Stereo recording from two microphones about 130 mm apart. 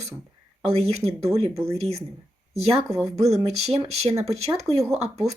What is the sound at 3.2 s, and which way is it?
Speech, 55° right (ahead or behind).